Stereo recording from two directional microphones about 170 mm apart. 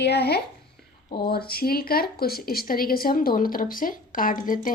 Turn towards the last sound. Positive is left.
turn(degrees=55)  # may be behind; listen again after turning